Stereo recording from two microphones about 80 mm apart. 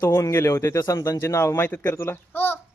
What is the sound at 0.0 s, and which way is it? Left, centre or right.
A man's voice, left.